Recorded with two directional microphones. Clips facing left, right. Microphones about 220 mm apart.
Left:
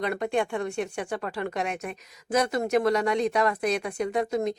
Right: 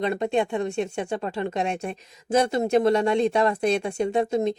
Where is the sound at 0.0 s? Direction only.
25° right (ahead or behind).